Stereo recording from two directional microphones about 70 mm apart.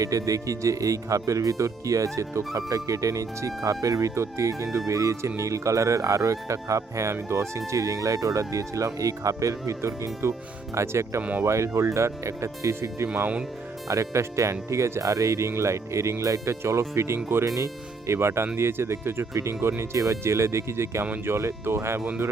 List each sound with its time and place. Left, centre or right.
0.0 s speech: right
11.2 s speech: right
11.4 s speech: right
13.1 s speech: right
13.8 s speech: right